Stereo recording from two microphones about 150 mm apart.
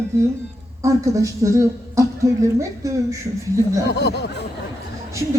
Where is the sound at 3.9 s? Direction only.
90° left.